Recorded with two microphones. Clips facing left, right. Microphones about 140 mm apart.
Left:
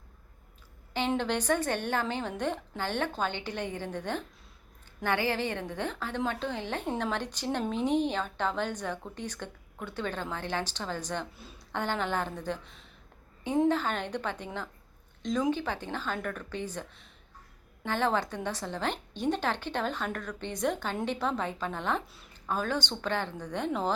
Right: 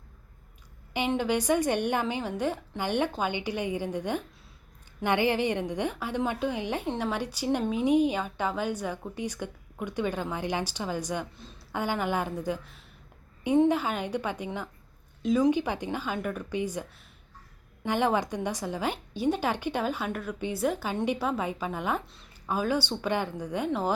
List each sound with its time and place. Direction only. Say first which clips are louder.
0.9 s a woman's voice: right 2 dB; 10° right (ahead or behind)
17.8 s a woman's voice: right 3 dB; 15° right (ahead or behind)